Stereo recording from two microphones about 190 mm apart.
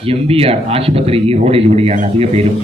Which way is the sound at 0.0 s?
30° right (ahead or behind).